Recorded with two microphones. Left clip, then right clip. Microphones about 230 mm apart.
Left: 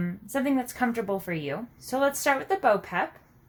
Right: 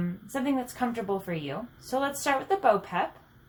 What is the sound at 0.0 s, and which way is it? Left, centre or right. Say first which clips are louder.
Speech: left 3 dB; left.